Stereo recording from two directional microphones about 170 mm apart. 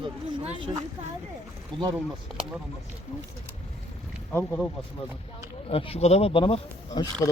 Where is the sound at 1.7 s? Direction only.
Centre (ahead or behind).